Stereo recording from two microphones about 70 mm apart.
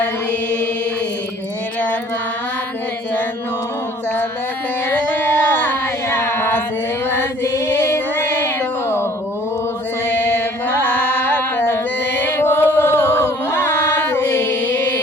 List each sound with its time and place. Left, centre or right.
4.9 s a sound: left
7.4 s music: left
10.2 s mantra: left
10.8 s carnatic music: left
12.2 s chant: left